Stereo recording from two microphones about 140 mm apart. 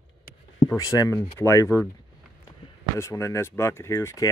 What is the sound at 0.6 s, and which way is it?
Speech, 25° left (ahead or behind).